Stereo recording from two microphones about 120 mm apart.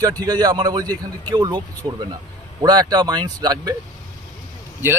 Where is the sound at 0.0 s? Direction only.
30° right (ahead or behind).